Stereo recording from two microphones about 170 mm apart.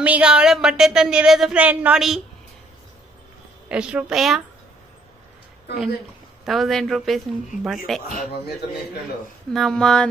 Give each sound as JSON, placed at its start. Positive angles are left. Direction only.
{"t": 0.0, "sound": "speech", "side_deg": -5}
{"t": 3.6, "sound": "speech", "side_deg": -5}
{"t": 6.4, "sound": "speech", "side_deg": 0}
{"t": 8.1, "sound": "speech", "side_deg": 65}
{"t": 9.5, "sound": "speech", "side_deg": 0}